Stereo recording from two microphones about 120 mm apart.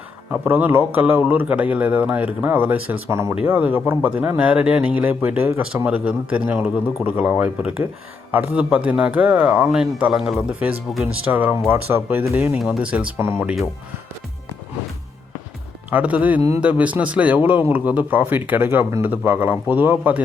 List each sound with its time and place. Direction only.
0.3 s speech: 15° right (ahead or behind)
9.6 s a man's voice: centre (ahead or behind)
11.3 s speech: 15° right (ahead or behind)
12.5 s speech: 5° right (ahead or behind)
15.9 s speech: 10° right (ahead or behind)